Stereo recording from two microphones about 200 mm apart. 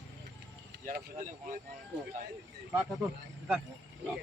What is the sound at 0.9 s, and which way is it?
Speech, 40° right (ahead or behind).